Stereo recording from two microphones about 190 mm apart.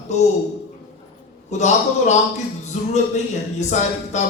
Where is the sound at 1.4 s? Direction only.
35° left (ahead or behind).